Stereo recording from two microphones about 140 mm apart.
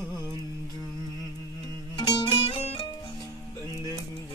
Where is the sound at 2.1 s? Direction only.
35° left (ahead or behind).